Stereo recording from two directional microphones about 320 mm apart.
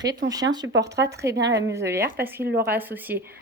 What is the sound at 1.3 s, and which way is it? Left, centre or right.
Speech, right.